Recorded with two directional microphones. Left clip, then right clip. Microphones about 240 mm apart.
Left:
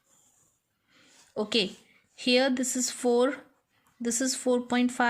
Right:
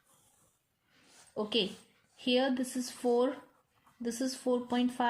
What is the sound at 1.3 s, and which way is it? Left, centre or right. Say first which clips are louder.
Speech: left 4 dB; left.